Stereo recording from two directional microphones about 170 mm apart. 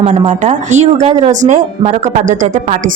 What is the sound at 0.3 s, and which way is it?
Speech, 45° right (ahead or behind).